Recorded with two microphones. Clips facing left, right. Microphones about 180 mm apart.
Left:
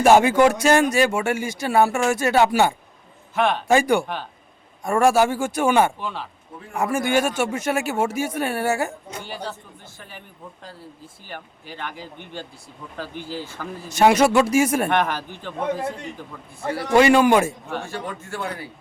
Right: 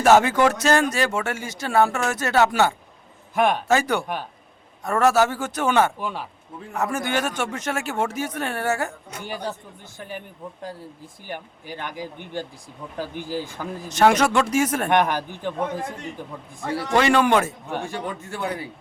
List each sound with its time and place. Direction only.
0.0 s speech: 15° left (ahead or behind)
3.3 s speech: 10° right (ahead or behind)
3.7 s speech: 10° left (ahead or behind)
6.0 s speech: 10° right (ahead or behind)
6.7 s speech: 10° left (ahead or behind)
9.2 s speech: 15° right (ahead or behind)
13.8 s speech: 10° left (ahead or behind)
14.8 s speech: 15° right (ahead or behind)
16.9 s speech: 10° left (ahead or behind)
17.7 s speech: 15° right (ahead or behind)